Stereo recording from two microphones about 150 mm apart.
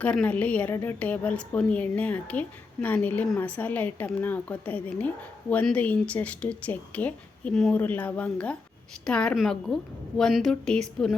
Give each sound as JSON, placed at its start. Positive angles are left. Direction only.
{"t": 0.0, "sound": "a woman's voice", "side_deg": 10}